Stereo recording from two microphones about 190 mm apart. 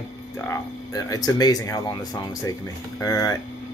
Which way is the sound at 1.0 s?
20° left (ahead or behind).